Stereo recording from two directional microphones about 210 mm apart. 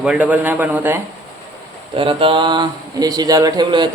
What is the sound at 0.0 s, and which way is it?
Speech, 5° right (ahead or behind).